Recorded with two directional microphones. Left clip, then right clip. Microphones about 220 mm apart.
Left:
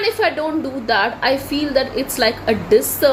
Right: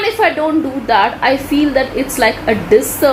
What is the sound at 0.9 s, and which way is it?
A woman's voice, 15° left (ahead or behind).